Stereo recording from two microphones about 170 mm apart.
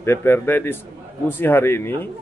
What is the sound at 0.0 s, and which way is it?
A man's voice, 15° left (ahead or behind).